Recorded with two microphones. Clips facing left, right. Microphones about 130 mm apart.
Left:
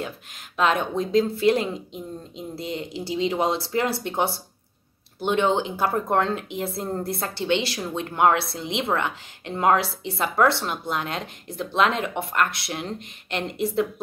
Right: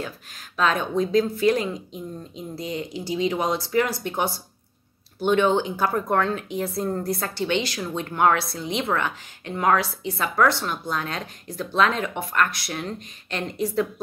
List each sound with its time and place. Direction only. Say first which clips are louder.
0.0 s speech: left 1 dB; 20° left (ahead or behind)